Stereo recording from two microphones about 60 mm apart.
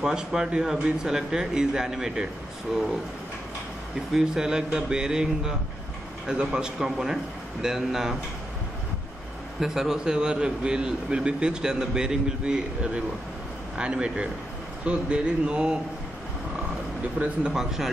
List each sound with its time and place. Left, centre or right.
0.0 s a man's voice: centre
4.1 s a man's voice: centre
9.6 s a man's voice: centre
17.2 s a man's voice: centre